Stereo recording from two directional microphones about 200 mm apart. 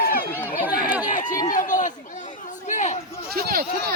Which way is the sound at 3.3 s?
45° right (ahead or behind).